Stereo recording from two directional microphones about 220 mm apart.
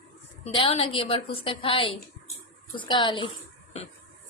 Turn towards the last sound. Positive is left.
turn(degrees=20)  # may be behind; listen again after turning